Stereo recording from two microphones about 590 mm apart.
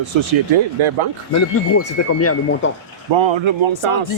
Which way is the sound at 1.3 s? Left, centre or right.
Left.